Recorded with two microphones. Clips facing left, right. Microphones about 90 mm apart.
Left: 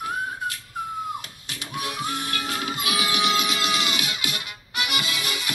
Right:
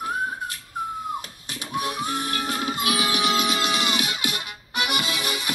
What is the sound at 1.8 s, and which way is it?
Music, 30° right (ahead or behind).